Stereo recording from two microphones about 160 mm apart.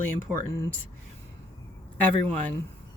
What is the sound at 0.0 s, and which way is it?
Speech, 15° left (ahead or behind).